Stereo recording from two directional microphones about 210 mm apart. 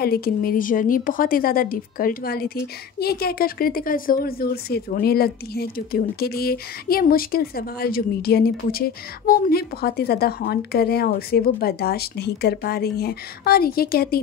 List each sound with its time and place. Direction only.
0.0 s a woman's voice: 45° left (ahead or behind)